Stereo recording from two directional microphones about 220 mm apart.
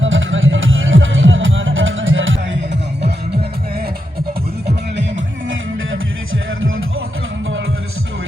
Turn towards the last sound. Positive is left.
turn(degrees=-65)  # may be behind; listen again after turning